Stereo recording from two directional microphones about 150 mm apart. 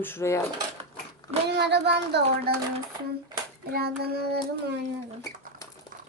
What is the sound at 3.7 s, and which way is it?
Child singing, 90° right.